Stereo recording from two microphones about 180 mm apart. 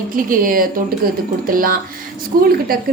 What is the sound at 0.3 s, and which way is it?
A woman's voice, 50° right (ahead or behind).